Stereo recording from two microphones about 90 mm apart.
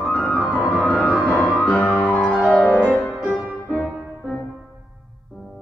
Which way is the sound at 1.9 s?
15° left (ahead or behind).